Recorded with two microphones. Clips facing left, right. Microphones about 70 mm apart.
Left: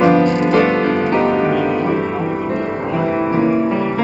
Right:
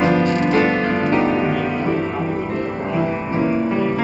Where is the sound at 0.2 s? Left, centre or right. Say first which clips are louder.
Left 3 dB; left.